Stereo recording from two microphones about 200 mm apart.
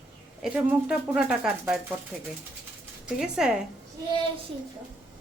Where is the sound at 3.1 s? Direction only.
5° right (ahead or behind).